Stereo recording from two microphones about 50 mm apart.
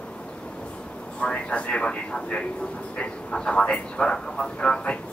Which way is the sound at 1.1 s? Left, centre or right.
Left.